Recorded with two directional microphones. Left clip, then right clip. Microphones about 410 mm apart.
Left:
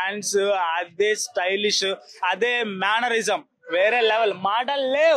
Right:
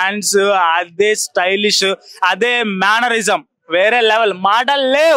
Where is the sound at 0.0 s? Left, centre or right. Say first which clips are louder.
Right 9 dB; right.